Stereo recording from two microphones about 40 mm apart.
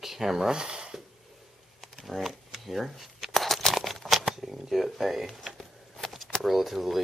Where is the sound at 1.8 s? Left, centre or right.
Centre.